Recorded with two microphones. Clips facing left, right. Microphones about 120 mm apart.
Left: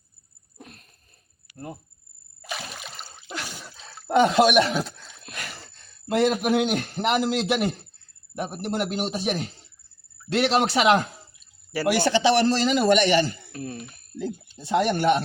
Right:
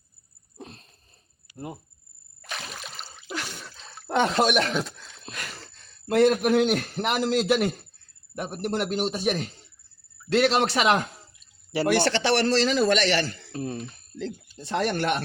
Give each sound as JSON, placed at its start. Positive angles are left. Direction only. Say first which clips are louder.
{"t": 0.5, "sound": "a sound", "louder": "right 4 dB", "side_deg": -30}
{"t": 2.4, "sound": "a sound", "louder": "left 2 dB", "side_deg": 5}
{"t": 6.1, "sound": "a man's voice", "louder": "right 2 dB", "side_deg": 0}
{"t": 12.0, "sound": "speech", "louder": "left 3 dB", "side_deg": 15}
{"t": 13.5, "sound": "speech", "louder": "right 3 dB", "side_deg": -30}
{"t": 13.8, "sound": "a man's voice", "louder": "left 2 dB", "side_deg": 15}